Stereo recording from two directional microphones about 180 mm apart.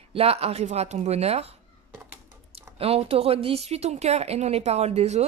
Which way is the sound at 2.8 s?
35° right (ahead or behind).